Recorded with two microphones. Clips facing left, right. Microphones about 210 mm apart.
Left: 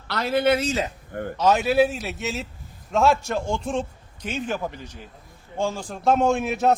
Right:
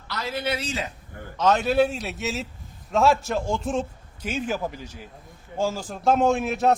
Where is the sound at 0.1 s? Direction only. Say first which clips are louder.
Left 8 dB; 60° left (ahead or behind).